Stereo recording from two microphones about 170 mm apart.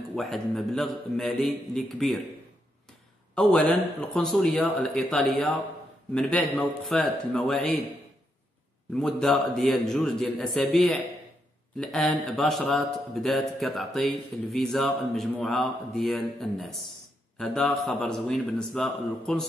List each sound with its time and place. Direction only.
0.1 s a man's voice: centre (ahead or behind)
3.3 s a man's voice: 5° left (ahead or behind)
8.9 s a man's voice: centre (ahead or behind)